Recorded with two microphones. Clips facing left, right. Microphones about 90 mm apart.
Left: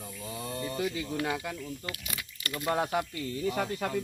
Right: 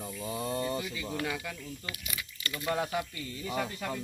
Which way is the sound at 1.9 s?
50° left (ahead or behind).